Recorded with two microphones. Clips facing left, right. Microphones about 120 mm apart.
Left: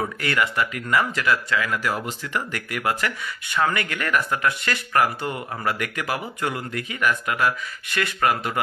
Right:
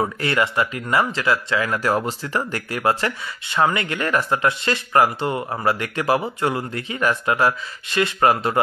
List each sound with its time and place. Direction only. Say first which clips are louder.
0.0 s speech: right 3 dB; 30° right (ahead or behind)
1.7 s speech: right 5 dB; 40° right (ahead or behind)